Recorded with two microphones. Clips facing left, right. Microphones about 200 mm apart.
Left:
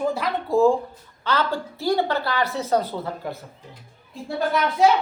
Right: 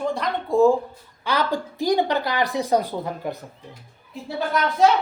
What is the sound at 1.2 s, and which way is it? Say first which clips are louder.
A woman's voice: even; 15° right (ahead or behind).